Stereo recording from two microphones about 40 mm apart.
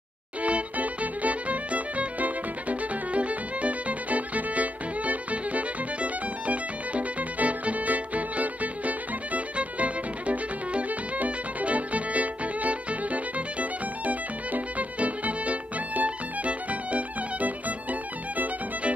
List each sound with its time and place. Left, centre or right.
0.4 s music: right